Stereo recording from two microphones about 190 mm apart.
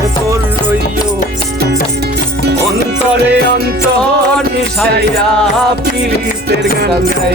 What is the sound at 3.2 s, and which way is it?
Music, 65° right (ahead or behind).